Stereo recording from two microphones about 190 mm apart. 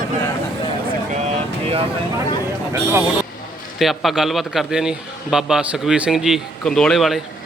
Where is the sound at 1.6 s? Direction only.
30° right (ahead or behind).